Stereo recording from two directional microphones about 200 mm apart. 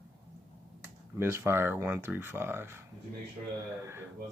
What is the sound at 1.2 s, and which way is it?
Speech, 10° right (ahead or behind).